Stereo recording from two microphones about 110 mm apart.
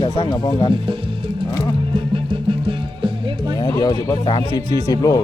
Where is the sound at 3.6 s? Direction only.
35° left (ahead or behind).